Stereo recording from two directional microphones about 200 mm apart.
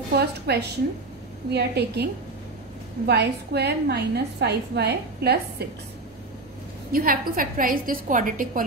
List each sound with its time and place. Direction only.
0.1 s a woman's voice: 55° right (ahead or behind)
3.1 s a woman's voice: 55° right (ahead or behind)
6.9 s a woman's voice: 45° right (ahead or behind)